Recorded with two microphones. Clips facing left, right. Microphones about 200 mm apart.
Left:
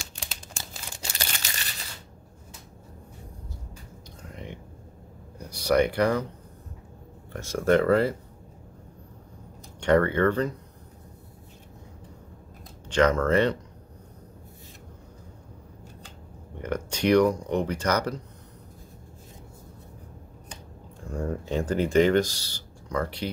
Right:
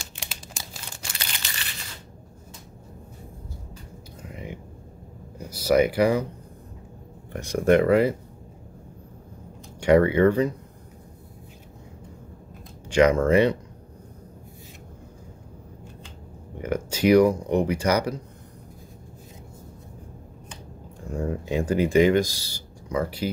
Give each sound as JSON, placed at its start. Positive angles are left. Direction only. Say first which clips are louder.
{"t": 1.2, "sound": "a sound", "louder": "left 2 dB", "side_deg": 40}
{"t": 4.2, "sound": "whispering", "louder": "right 3 dB", "side_deg": -5}
{"t": 5.4, "sound": "speech", "louder": "right 2 dB", "side_deg": -5}
{"t": 7.3, "sound": "speech", "louder": "right 3 dB", "side_deg": -15}
{"t": 9.8, "sound": "speech", "louder": "right 4 dB", "side_deg": -10}
{"t": 12.9, "sound": "speech", "louder": "right 3 dB", "side_deg": -10}
{"t": 16.5, "sound": "speech", "louder": "right 3 dB", "side_deg": -5}
{"t": 21.1, "sound": "speech", "louder": "right 2 dB", "side_deg": -10}